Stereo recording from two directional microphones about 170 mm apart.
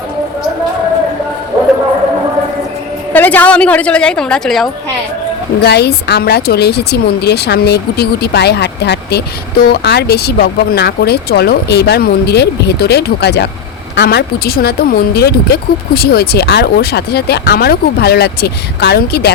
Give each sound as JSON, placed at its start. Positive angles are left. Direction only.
{"t": 3.1, "sound": "a woman's voice", "side_deg": 10}
{"t": 5.6, "sound": "speech", "side_deg": 75}